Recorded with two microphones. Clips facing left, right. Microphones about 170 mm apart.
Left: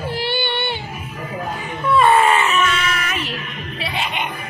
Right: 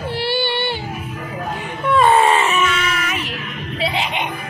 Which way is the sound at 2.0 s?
30° right (ahead or behind).